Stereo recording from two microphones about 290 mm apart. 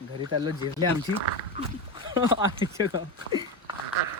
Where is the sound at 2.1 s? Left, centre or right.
Centre.